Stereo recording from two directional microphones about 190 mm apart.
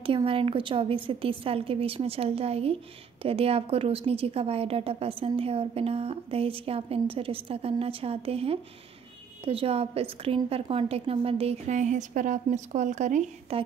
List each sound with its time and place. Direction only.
0.0 s a woman's voice: 30° right (ahead or behind)